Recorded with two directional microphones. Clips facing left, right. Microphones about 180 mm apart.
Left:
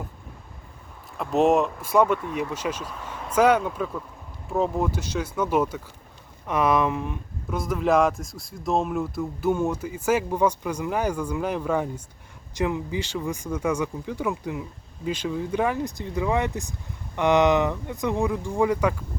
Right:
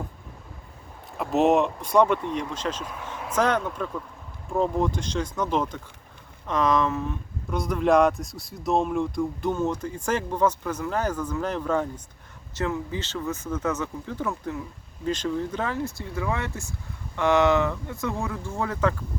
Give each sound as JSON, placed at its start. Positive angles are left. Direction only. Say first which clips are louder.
{"t": 1.2, "sound": "speech", "louder": "even", "side_deg": 0}
{"t": 7.5, "sound": "speech", "louder": "right 1 dB", "side_deg": 0}